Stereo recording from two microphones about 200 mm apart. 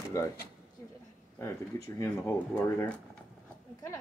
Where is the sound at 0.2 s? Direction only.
15° left (ahead or behind).